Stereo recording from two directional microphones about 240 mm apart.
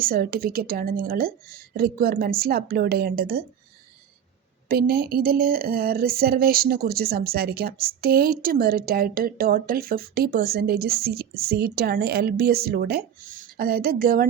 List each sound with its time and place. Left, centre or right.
0.0 s speech: right
4.7 s speech: right